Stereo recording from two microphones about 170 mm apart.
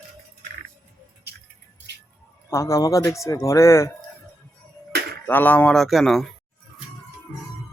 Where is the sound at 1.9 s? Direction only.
85° right.